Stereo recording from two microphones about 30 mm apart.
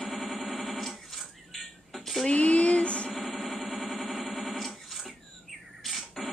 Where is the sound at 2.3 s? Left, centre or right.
Left.